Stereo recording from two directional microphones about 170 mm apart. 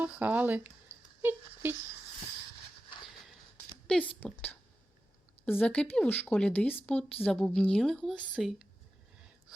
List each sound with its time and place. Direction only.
0.0 s speech: 10° right (ahead or behind)
3.8 s a woman's voice: 5° left (ahead or behind)